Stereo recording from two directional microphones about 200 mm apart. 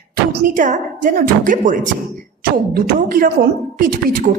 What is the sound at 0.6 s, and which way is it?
A woman's voice, 40° right (ahead or behind).